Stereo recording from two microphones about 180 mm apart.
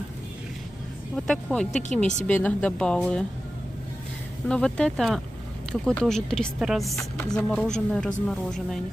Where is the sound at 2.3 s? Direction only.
10° left (ahead or behind).